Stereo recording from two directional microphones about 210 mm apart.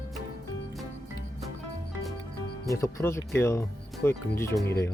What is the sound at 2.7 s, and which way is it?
Speech, 15° left (ahead or behind).